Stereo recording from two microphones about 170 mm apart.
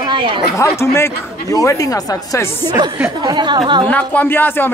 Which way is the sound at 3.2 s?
25° right (ahead or behind).